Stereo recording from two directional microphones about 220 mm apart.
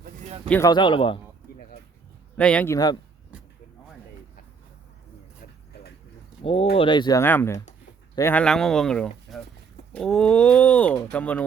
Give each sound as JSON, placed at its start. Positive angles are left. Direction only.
{"t": 0.3, "sound": "a sound", "side_deg": -25}
{"t": 0.5, "sound": "speech", "side_deg": 15}
{"t": 2.4, "sound": "speech", "side_deg": 5}
{"t": 6.4, "sound": "speech", "side_deg": 25}